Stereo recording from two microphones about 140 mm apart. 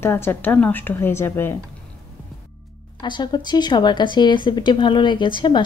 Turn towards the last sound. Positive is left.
turn(degrees=35)  # may be behind; listen again after turning